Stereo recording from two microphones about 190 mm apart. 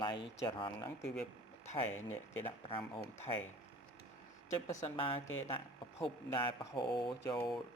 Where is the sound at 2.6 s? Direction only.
30° left (ahead or behind).